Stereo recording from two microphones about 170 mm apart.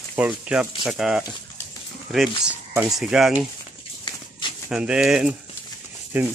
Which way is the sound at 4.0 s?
30° left (ahead or behind).